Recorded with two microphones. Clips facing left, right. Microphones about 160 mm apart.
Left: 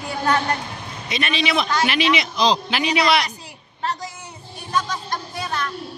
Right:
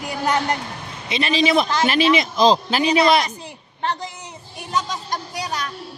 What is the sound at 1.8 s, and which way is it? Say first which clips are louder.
Speech: right 3 dB; 45° right (ahead or behind).